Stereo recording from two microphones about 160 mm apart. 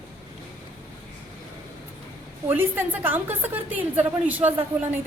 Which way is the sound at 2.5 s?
15° right (ahead or behind).